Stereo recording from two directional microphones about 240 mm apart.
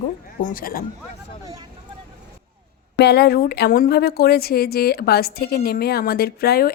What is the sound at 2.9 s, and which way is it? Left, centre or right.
A woman's voice, left.